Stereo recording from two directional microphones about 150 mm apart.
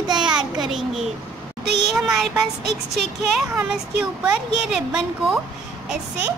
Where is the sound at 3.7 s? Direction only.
5° right (ahead or behind).